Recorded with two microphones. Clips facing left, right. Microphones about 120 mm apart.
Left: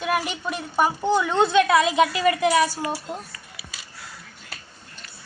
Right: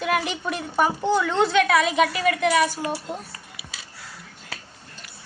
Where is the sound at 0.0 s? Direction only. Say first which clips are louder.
Right 1 dB; 5° left (ahead or behind).